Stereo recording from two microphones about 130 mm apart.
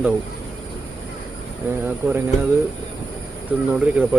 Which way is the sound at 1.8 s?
15° right (ahead or behind).